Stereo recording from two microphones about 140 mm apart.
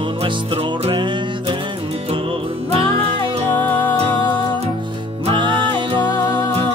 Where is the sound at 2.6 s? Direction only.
45° right (ahead or behind).